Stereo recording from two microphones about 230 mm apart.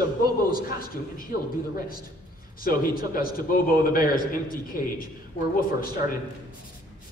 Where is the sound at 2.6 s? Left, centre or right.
Left.